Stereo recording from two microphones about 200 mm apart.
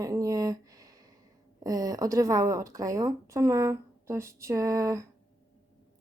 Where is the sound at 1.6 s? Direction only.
20° right (ahead or behind).